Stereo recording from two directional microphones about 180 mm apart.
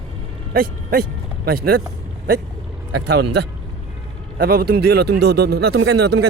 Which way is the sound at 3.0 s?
70° right (ahead or behind).